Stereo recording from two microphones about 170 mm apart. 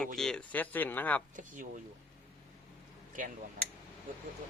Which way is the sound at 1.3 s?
50° right (ahead or behind).